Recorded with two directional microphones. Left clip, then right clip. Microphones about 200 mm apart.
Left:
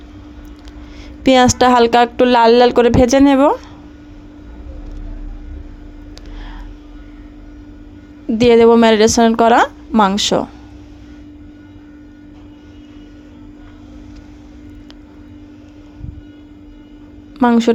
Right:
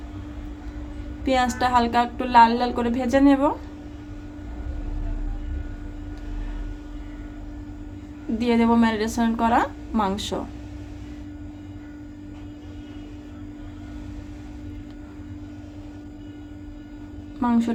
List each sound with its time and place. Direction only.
1.2 s speech: 50° left (ahead or behind)
8.4 s speech: 45° left (ahead or behind)
17.4 s a woman's voice: 45° left (ahead or behind)